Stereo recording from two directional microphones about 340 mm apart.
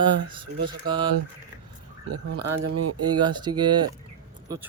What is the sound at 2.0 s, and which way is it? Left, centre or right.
Speech, right.